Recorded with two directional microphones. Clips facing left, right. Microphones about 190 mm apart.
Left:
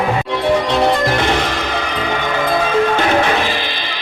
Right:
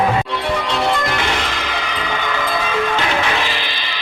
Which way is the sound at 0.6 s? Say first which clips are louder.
Left 4 dB; 55° left (ahead or behind).